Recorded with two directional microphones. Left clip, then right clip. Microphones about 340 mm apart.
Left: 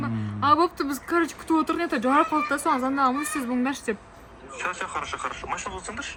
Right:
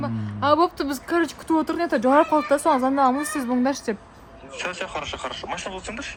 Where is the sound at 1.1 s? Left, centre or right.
Centre.